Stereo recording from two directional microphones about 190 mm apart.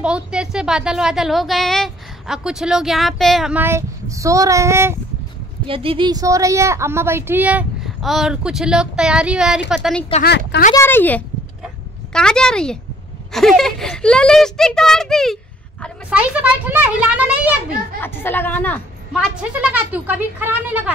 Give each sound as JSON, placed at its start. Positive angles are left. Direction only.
{"t": 0.0, "sound": "a woman's voice", "side_deg": -5}
{"t": 5.7, "sound": "a woman's voice", "side_deg": -30}
{"t": 10.2, "sound": "speech", "side_deg": 65}
{"t": 10.7, "sound": "speech", "side_deg": 10}
{"t": 11.6, "sound": "dog", "side_deg": 5}
{"t": 13.3, "sound": "a woman's voice", "side_deg": 0}
{"t": 18.0, "sound": "speech", "side_deg": 10}
{"t": 19.1, "sound": "a woman's voice", "side_deg": -5}